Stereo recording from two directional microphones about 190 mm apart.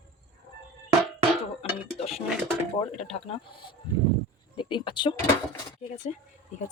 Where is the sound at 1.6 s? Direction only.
30° left (ahead or behind).